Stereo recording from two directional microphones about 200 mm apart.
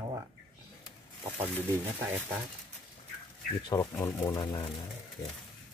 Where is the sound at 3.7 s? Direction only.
15° left (ahead or behind).